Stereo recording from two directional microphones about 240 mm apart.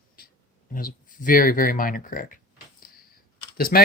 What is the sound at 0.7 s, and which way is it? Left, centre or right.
Speech, left.